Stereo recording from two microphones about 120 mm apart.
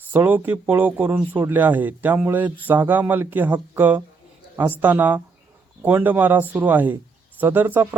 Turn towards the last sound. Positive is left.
turn(degrees=-15)  # may be behind; listen again after turning